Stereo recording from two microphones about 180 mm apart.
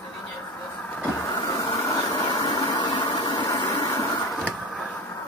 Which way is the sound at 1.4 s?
15° left (ahead or behind).